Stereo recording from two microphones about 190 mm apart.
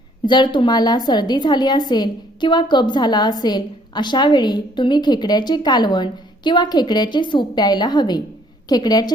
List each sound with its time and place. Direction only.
0.3 s a woman's voice: 25° left (ahead or behind)